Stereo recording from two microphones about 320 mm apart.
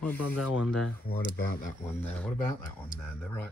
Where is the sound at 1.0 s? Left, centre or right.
Left.